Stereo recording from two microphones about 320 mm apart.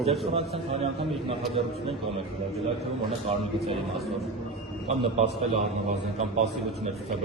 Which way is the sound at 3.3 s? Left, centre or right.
Centre.